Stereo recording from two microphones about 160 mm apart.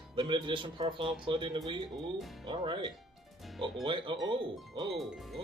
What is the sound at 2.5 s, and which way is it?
Speech, 30° right (ahead or behind).